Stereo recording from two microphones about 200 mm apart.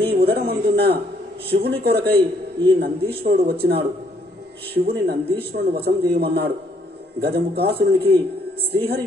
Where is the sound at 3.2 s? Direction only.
50° right (ahead or behind).